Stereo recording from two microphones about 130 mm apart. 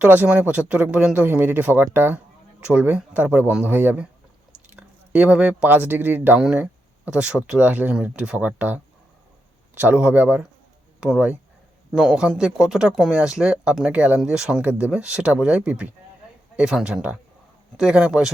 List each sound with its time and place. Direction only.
0.0 s speech: 10° right (ahead or behind)